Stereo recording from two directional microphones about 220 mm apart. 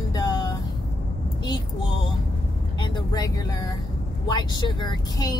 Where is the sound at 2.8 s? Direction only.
15° left (ahead or behind).